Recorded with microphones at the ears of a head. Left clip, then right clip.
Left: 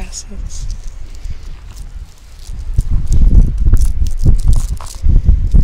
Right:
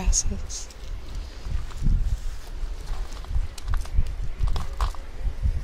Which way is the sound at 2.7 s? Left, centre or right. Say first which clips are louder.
Left 14 dB; left.